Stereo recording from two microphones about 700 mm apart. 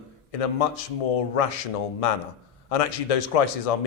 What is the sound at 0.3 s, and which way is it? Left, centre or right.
A man's voice, left.